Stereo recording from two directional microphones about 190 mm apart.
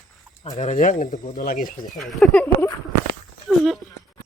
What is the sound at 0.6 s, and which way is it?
Speech, 40° left (ahead or behind).